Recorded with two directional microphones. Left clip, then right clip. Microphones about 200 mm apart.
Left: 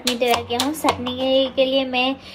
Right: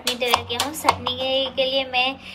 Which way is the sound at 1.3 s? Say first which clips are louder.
Left 5 dB; 45° right (ahead or behind).